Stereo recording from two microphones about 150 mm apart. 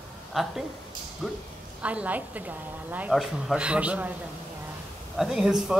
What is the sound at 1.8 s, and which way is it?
A woman's voice, 10° right (ahead or behind).